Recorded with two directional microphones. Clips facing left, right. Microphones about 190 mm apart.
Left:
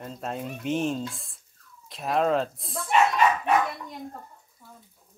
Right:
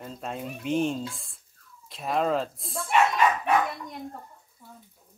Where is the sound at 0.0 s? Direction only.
Centre (ahead or behind).